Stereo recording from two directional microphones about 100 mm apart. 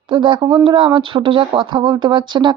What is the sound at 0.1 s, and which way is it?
Speech, 60° right (ahead or behind).